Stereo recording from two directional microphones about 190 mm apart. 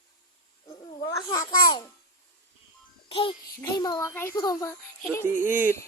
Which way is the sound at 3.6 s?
20° left (ahead or behind).